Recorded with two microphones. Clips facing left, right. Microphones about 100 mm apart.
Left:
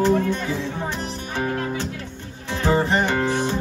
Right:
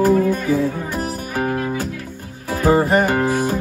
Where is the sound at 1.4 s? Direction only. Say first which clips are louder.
Right 3 dB; 45° right (ahead or behind).